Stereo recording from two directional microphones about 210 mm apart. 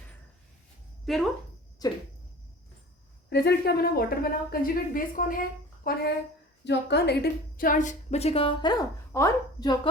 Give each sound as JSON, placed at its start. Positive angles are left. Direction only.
{"t": 1.0, "sound": "speech", "side_deg": 0}
{"t": 3.2, "sound": "a woman's voice", "side_deg": 50}